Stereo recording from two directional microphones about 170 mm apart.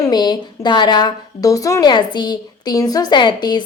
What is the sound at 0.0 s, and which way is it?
A woman's voice, 25° left (ahead or behind).